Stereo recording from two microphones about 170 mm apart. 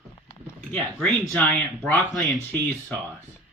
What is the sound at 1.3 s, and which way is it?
Speech, 10° left (ahead or behind).